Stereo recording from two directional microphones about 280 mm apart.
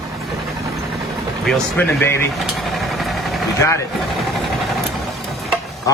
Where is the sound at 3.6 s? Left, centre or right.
Centre.